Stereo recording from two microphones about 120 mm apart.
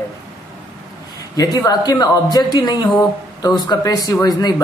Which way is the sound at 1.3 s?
30° left (ahead or behind).